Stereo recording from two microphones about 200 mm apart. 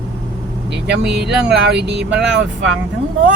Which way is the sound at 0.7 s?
60° right (ahead or behind).